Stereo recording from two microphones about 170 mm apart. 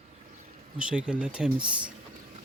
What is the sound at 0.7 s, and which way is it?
Speech, 5° right (ahead or behind).